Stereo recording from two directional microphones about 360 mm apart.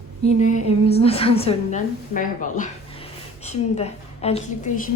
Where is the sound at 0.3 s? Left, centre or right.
Centre.